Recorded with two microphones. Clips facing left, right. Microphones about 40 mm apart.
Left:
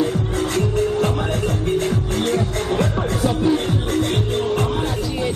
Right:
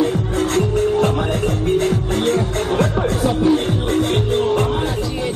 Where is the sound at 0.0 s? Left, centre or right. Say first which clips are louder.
Right 2 dB; right.